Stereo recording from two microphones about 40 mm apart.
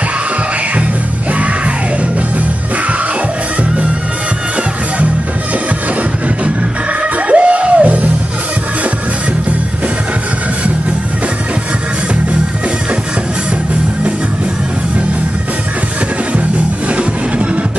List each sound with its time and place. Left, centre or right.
7.2 s music: right